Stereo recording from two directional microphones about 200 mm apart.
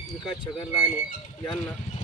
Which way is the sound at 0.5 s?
20° left (ahead or behind).